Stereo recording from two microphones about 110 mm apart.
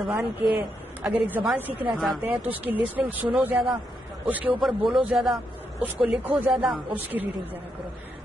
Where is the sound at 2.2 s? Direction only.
15° right (ahead or behind).